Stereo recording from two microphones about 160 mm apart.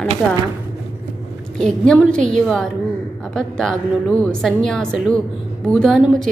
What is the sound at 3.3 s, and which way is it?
A woman's voice, 5° left (ahead or behind).